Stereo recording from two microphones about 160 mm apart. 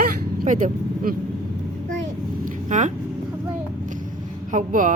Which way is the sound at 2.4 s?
50° right (ahead or behind).